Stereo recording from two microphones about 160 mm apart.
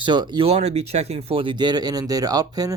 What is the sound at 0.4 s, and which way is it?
Speech, 40° right (ahead or behind).